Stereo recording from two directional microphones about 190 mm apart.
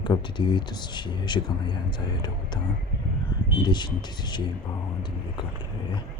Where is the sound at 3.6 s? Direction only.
25° left (ahead or behind).